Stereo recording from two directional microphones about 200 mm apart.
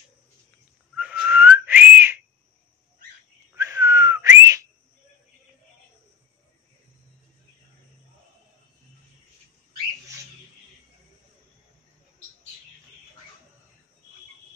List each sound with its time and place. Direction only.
0.9 s whistling: 5° right (ahead or behind)
3.5 s whistling: 15° right (ahead or behind)